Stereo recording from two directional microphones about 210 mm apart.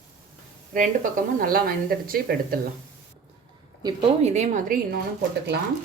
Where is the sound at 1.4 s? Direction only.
45° right (ahead or behind).